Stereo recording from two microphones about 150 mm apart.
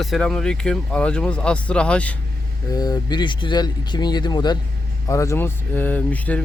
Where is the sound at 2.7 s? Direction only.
25° left (ahead or behind).